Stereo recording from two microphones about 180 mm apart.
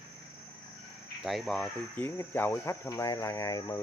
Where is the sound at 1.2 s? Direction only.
Centre (ahead or behind).